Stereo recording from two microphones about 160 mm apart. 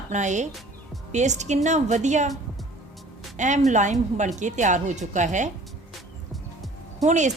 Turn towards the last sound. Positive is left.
turn(degrees=-50)  # may be behind; listen again after turning